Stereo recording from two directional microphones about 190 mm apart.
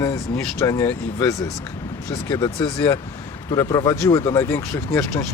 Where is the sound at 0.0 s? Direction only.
15° left (ahead or behind).